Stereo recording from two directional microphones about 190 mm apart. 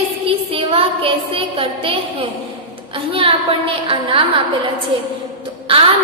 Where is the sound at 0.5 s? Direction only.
30° right (ahead or behind).